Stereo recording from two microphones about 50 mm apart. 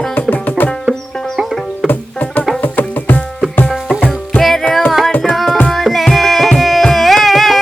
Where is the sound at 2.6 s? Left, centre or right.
Left.